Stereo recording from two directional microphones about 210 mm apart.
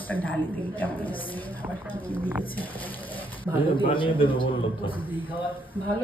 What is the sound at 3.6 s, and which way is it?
A man's voice, 25° left (ahead or behind).